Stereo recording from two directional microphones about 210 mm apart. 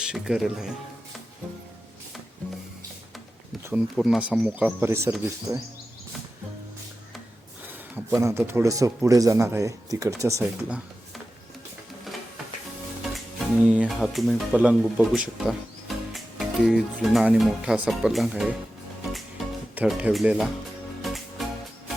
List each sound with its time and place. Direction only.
0.0 s speech: 5° right (ahead or behind)
3.7 s speech: 5° right (ahead or behind)
7.7 s speech: 10° right (ahead or behind)
13.7 s speech: 5° right (ahead or behind)
19.7 s speech: 5° right (ahead or behind)
21.0 s music: centre (ahead or behind)